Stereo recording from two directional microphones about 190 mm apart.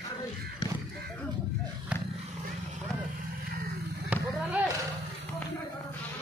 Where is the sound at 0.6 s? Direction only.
20° left (ahead or behind).